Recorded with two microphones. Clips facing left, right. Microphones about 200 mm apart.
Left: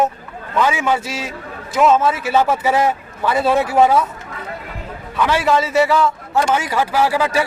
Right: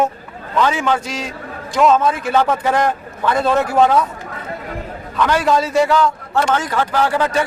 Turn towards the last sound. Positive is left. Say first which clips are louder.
# even
turn(degrees=10)  # may be behind; listen again after turning